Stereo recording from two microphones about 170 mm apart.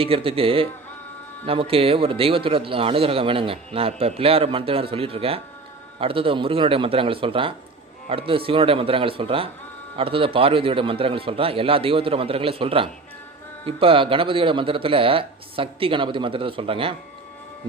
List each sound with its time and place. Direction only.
0.0 s speech: 35° right (ahead or behind)